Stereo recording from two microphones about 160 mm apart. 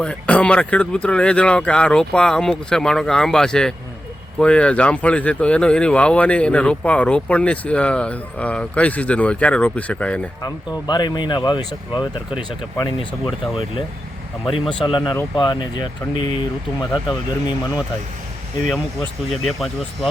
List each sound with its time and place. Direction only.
0.0 s speech: 5° left (ahead or behind)
10.4 s speech: 25° left (ahead or behind)
12.8 s speech: 30° left (ahead or behind)
14.4 s speech: 30° left (ahead or behind)
18.7 s speech: centre (ahead or behind)